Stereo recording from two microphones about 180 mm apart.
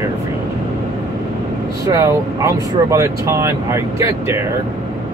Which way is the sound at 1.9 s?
15° right (ahead or behind).